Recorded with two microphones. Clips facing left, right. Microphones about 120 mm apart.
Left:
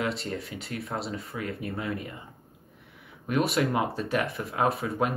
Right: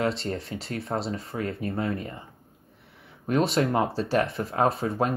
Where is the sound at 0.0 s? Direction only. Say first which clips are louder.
Right 3 dB; 30° right (ahead or behind).